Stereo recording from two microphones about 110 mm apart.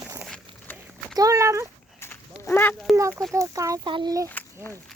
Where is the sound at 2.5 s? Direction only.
15° left (ahead or behind).